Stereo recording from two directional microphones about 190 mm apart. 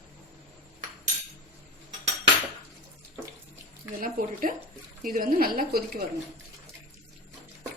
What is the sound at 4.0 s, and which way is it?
A woman's voice, 45° right (ahead or behind).